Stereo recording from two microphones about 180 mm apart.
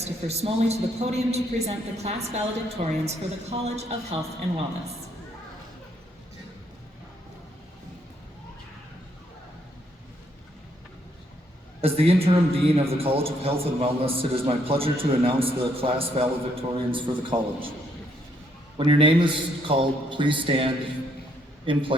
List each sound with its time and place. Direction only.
0.0 s a man's voice: 35° right (ahead or behind)
11.8 s a man's voice: 35° right (ahead or behind)
18.8 s a man's voice: 30° right (ahead or behind)
21.7 s a man's voice: 30° right (ahead or behind)